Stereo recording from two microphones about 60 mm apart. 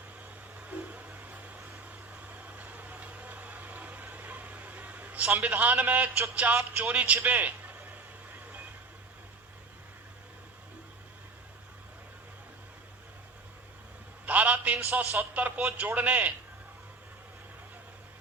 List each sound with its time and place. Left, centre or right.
0.6 s vehicle: right
5.4 s a man's voice: right
6.7 s a sound: right
14.3 s a sound: right
14.9 s speech: right
15.3 s a man's voice: right